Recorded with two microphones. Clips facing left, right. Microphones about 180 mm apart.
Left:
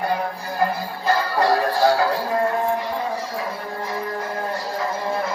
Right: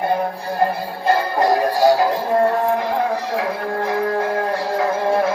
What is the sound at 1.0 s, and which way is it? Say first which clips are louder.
Music: right 3 dB; 20° right (ahead or behind).